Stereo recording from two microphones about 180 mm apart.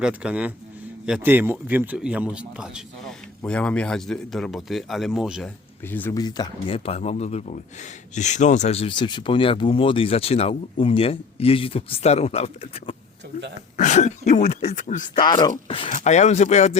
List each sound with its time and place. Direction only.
0.0 s a man's voice: 5° right (ahead or behind)
5.8 s speech: 10° left (ahead or behind); by 15.0 s 45° left (ahead or behind)
15.2 s speech: 25° left (ahead or behind); by 16.7 s 40° left (ahead or behind)